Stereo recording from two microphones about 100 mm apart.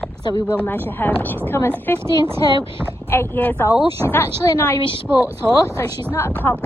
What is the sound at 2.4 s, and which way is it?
Speech, 60° right (ahead or behind).